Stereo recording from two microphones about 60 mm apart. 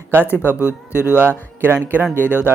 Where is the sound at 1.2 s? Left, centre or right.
Right.